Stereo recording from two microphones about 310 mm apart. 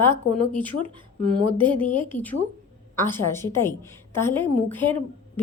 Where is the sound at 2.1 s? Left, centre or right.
Centre.